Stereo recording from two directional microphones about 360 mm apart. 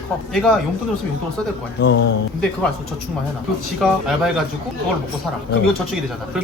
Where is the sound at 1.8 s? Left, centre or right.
Left.